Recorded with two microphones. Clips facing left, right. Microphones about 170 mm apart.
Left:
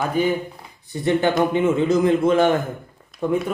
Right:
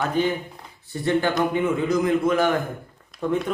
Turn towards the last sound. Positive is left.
turn(degrees=15)  # may be behind; listen again after turning